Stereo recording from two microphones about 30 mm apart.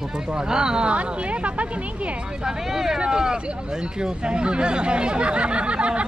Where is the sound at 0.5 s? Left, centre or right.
Right.